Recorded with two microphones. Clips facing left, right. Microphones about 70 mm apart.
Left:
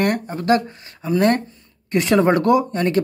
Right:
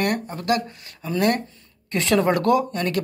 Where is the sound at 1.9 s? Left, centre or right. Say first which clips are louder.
Left 4 dB; left.